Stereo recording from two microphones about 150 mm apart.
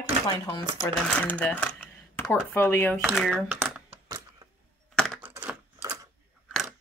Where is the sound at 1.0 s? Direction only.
10° left (ahead or behind).